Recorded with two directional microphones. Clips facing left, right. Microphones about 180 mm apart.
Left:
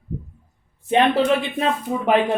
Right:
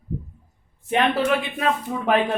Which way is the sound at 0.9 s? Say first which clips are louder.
Left 3 dB; 25° left (ahead or behind).